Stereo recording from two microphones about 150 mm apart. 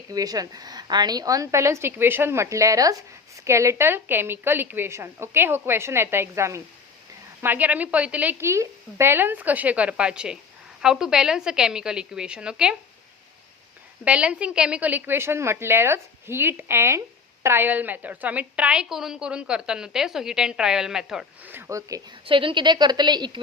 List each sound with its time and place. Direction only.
0.1 s a woman's voice: 25° right (ahead or behind); by 12.7 s 5° right (ahead or behind)
14.0 s a woman's voice: 10° right (ahead or behind)
22.3 s speech: 35° right (ahead or behind)